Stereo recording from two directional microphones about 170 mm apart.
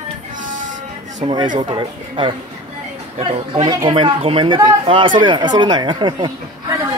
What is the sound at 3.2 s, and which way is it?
Speech, 40° right (ahead or behind).